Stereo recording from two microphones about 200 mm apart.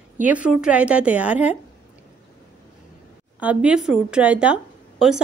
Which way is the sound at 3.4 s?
5° right (ahead or behind).